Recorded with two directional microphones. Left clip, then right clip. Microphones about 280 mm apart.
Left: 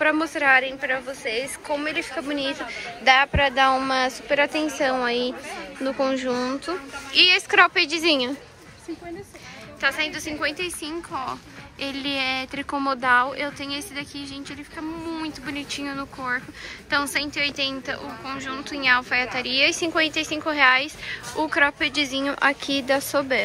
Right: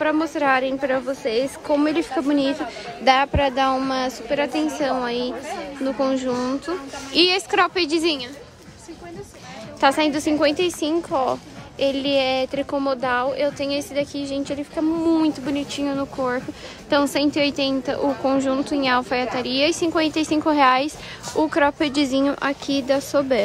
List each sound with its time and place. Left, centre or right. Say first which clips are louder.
0.0 s a woman's voice: even; centre
9.8 s a woman's voice: right 6 dB; centre